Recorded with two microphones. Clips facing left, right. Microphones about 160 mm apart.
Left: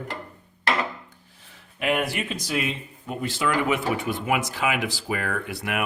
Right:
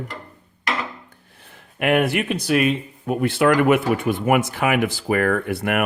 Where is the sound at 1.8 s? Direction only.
60° right (ahead or behind).